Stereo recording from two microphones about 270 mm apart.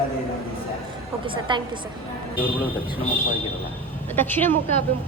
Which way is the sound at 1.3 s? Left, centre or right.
Centre.